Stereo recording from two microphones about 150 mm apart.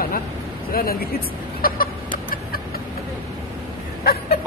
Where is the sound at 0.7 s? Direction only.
80° left.